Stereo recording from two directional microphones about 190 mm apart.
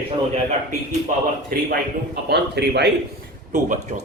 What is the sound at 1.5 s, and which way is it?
Speech, 50° right (ahead or behind).